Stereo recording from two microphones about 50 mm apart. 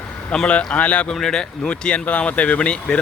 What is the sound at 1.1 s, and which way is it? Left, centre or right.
Speech, centre.